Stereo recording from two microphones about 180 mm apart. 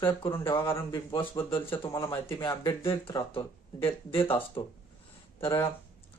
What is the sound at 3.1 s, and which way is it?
Speech, 30° left (ahead or behind).